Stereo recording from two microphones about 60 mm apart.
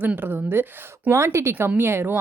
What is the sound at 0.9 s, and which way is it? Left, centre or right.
Speech, right.